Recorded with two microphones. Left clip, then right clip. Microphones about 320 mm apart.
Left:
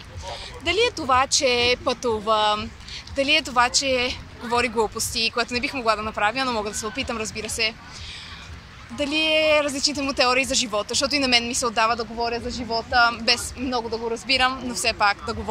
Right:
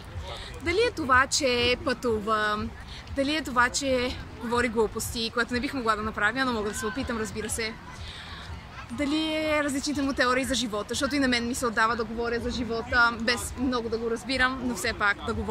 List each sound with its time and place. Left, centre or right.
0.7 s speech: centre
8.9 s speech: centre